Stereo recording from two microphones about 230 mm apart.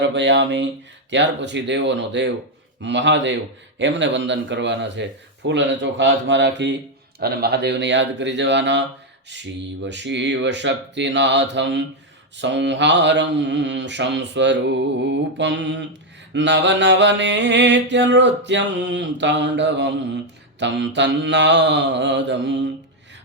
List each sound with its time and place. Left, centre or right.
0.0 s mantra: right